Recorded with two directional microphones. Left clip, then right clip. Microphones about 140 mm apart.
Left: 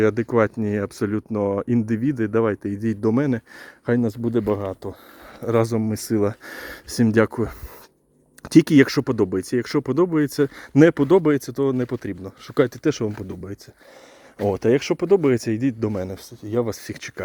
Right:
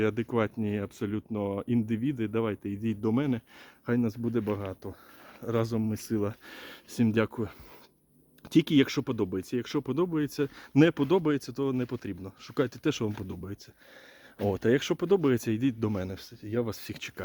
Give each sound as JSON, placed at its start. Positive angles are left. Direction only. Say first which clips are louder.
{"t": 0.0, "sound": "speech", "louder": "left 10 dB", "side_deg": 40}
{"t": 12.8, "sound": "speech", "louder": "left 8 dB", "side_deg": 20}
{"t": 16.4, "sound": "speech", "louder": "left 8 dB", "side_deg": 35}